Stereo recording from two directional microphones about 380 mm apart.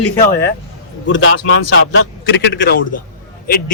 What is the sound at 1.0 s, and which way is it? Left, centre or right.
A man's voice, left.